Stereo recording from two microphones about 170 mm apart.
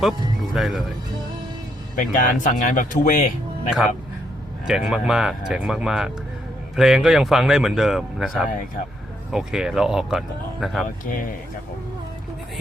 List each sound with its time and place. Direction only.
0.5 s speech: centre (ahead or behind)
2.0 s speech: 50° left (ahead or behind)
4.6 s speech: 5° right (ahead or behind)
10.8 s speech: 50° left (ahead or behind)